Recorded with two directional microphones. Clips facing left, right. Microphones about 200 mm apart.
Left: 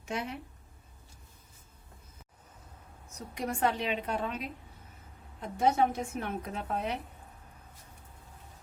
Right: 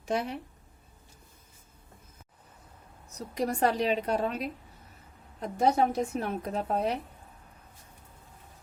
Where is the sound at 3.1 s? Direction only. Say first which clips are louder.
Right 5 dB; 35° right (ahead or behind).